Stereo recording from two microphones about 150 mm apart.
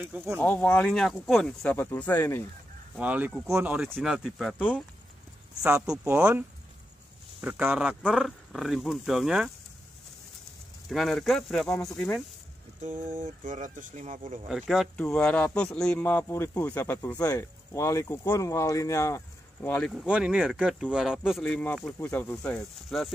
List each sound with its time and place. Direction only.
0.0 s speech: 15° right (ahead or behind)
0.4 s speech: 10° left (ahead or behind)
3.0 s speech: 10° right (ahead or behind)
7.4 s speech: 10° right (ahead or behind)
10.9 s speech: centre (ahead or behind)
12.8 s speech: 55° right (ahead or behind)
14.5 s speech: centre (ahead or behind); by 19.7 s 20° left (ahead or behind)
19.7 s speech: 5° left (ahead or behind)